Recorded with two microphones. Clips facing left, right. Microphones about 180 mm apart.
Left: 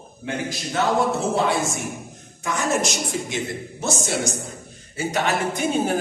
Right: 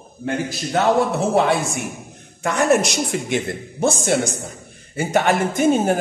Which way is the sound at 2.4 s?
65° right (ahead or behind).